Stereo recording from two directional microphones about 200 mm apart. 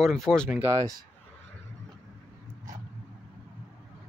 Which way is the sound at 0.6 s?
15° right (ahead or behind).